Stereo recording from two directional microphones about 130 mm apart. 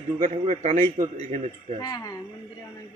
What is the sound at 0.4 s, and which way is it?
Speech, 60° right (ahead or behind).